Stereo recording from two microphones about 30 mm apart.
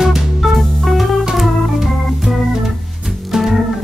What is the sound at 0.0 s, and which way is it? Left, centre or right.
Music, centre.